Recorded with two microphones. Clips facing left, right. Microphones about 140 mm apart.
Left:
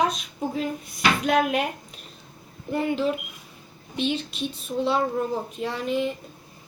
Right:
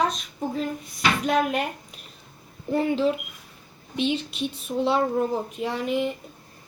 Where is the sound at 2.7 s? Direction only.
25° right (ahead or behind).